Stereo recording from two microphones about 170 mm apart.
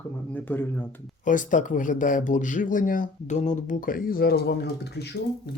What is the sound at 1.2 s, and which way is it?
A man's voice, 50° left (ahead or behind).